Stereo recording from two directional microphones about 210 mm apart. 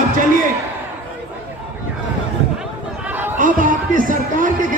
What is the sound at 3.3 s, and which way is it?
Speech, 40° right (ahead or behind).